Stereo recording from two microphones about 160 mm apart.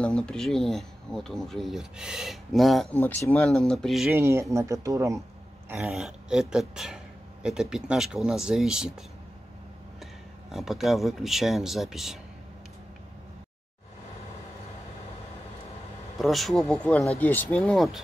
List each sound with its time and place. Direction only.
0.0 s speech: 5° left (ahead or behind)
2.9 s speech: 10° left (ahead or behind)
4.1 s speech: 15° right (ahead or behind)
5.9 s speech: centre (ahead or behind)
10.5 s speech: centre (ahead or behind)
16.2 s speech: centre (ahead or behind)